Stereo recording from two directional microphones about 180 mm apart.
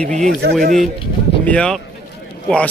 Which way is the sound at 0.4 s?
55° right (ahead or behind).